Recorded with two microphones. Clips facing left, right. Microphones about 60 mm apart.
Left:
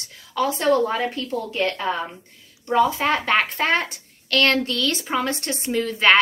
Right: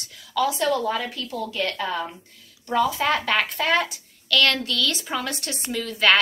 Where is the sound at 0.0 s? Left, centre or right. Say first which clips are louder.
Even; left.